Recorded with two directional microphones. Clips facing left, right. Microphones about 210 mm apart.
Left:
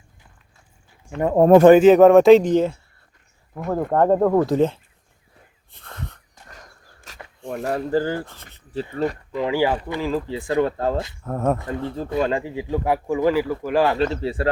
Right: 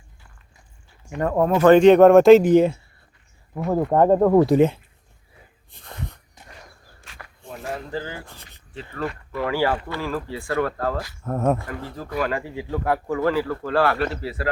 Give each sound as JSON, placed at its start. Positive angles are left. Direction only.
{"t": 1.2, "sound": "speech", "side_deg": 20}
{"t": 1.7, "sound": "speech", "side_deg": 5}
{"t": 5.7, "sound": "wheeze", "side_deg": -15}
{"t": 7.1, "sound": "a sound", "side_deg": 40}
{"t": 7.9, "sound": "speech", "side_deg": 40}
{"t": 9.3, "sound": "speech", "side_deg": 15}
{"t": 11.2, "sound": "speech", "side_deg": 0}
{"t": 11.5, "sound": "speech", "side_deg": 20}